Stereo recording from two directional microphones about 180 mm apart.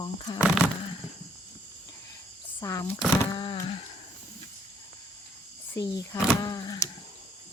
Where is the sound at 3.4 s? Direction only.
25° left (ahead or behind).